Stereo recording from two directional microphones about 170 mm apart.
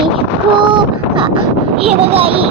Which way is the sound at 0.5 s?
30° right (ahead or behind).